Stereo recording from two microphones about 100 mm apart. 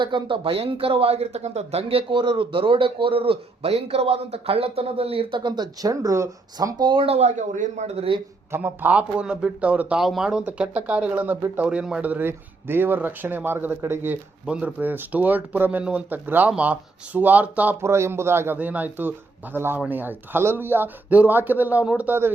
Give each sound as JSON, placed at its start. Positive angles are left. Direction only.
{"t": 0.0, "sound": "speech", "side_deg": -55}
{"t": 7.9, "sound": "speech", "side_deg": -65}
{"t": 8.5, "sound": "speech", "side_deg": -20}
{"t": 14.4, "sound": "speech", "side_deg": -10}